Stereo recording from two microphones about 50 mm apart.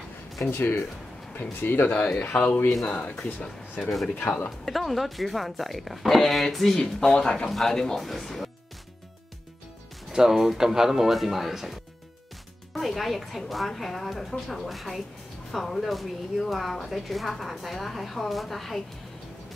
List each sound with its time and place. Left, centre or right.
0.5 s a man's voice: left
4.2 s speech: left
4.5 s speech: centre
10.1 s speech: centre